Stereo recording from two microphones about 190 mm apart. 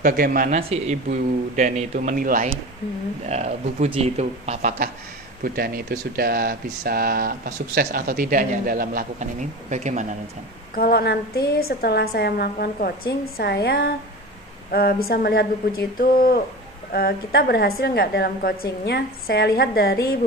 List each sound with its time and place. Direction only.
0.0 s speech: 50° right (ahead or behind)
0.6 s speech: 30° right (ahead or behind)
1.6 s speech: 45° right (ahead or behind)
3.3 s speech: 35° right (ahead or behind)
10.7 s a woman's voice: 50° left (ahead or behind)